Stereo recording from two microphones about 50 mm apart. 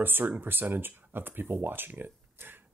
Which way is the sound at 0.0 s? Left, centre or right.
Right.